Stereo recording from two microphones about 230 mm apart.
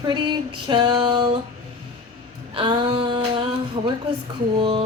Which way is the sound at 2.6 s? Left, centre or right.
Right.